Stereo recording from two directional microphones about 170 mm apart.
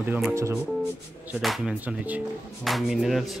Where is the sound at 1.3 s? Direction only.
Centre (ahead or behind).